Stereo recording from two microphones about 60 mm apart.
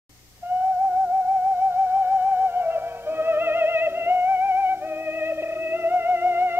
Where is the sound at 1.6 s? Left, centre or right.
Right.